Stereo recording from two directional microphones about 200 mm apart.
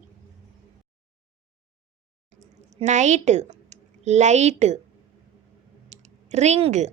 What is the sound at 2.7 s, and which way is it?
A woman's voice, 35° right (ahead or behind).